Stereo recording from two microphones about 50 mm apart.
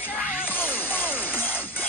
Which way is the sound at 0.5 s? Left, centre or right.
Left.